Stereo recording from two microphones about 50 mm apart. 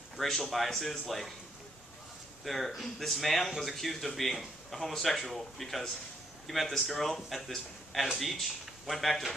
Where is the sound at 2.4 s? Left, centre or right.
Centre.